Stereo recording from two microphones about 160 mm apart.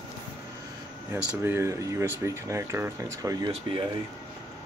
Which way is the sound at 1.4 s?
15° right (ahead or behind).